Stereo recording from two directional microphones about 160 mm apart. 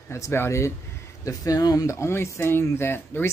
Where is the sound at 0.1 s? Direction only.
15° left (ahead or behind).